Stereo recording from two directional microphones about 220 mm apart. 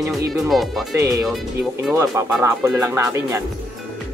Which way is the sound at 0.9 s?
15° right (ahead or behind).